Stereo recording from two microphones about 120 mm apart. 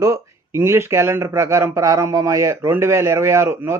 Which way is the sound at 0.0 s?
25° right (ahead or behind).